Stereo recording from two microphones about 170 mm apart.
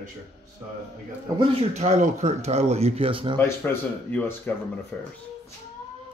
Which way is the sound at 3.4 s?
10° left (ahead or behind).